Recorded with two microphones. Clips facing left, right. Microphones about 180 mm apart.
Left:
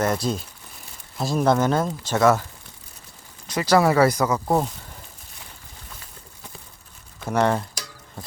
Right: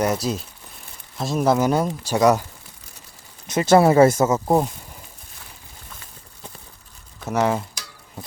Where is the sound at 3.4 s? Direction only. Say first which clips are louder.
Right 4 dB; 25° right (ahead or behind).